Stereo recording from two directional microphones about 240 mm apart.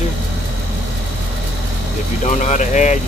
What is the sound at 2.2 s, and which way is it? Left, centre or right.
Speech, left.